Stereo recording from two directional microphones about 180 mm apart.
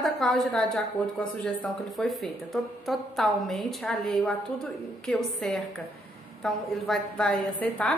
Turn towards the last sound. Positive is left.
turn(degrees=10)  # may be behind; listen again after turning